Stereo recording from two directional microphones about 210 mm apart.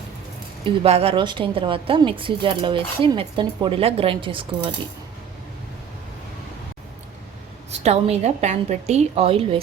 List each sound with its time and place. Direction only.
0.6 s a woman's voice: 25° right (ahead or behind)
7.9 s a woman's voice: 30° right (ahead or behind)